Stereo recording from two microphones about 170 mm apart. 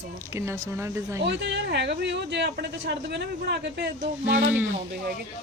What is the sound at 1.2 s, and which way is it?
Speech, 90° right.